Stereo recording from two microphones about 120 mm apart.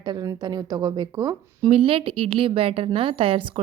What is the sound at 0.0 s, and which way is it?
Speech, 35° right (ahead or behind).